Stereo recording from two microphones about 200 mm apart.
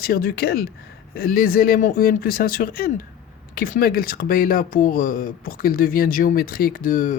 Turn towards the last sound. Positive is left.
turn(degrees=40)  # may be behind; listen again after turning